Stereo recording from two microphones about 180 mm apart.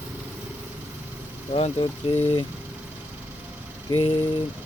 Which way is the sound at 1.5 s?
30° left (ahead or behind).